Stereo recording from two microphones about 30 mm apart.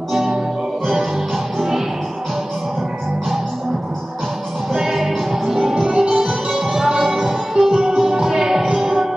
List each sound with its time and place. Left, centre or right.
0.9 s music: centre
4.8 s music: centre